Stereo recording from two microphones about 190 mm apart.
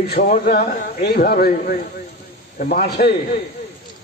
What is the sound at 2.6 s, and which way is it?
Speech, 55° left (ahead or behind).